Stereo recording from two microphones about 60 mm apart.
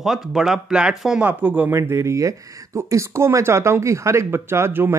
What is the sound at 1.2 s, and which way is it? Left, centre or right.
Speech, right.